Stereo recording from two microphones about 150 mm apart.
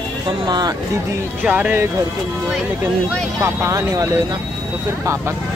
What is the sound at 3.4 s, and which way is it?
Speech, 20° right (ahead or behind).